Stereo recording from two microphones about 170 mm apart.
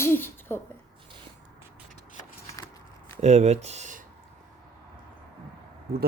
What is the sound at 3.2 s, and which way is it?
Speech, 40° right (ahead or behind).